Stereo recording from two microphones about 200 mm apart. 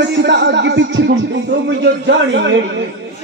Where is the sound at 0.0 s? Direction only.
60° right (ahead or behind).